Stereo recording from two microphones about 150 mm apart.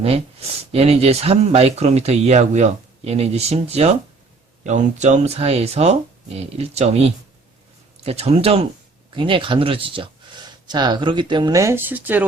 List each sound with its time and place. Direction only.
0.0 s speech: 40° right (ahead or behind); by 12.2 s 10° right (ahead or behind)